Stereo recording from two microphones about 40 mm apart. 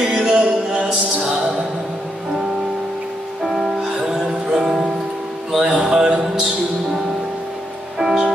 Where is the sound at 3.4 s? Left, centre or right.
Centre.